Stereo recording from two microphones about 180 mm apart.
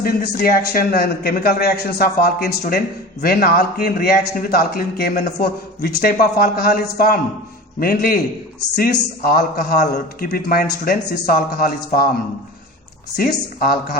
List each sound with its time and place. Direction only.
0.0 s a man's voice: 55° left (ahead or behind)
13.1 s a man's voice: 55° left (ahead or behind)